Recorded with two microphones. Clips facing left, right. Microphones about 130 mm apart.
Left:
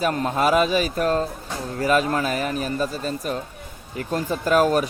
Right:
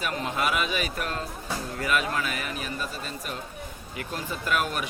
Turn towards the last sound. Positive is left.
turn(degrees=40)  # may be behind; listen again after turning